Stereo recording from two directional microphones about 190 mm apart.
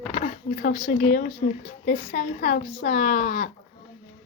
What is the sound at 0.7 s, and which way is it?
Speech, 40° left (ahead or behind).